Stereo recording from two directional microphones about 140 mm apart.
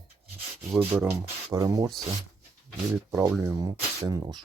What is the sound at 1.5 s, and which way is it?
Speech, 25° right (ahead or behind).